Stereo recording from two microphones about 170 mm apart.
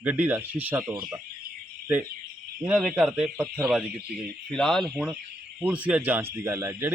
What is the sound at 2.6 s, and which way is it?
A man's voice, 10° right (ahead or behind).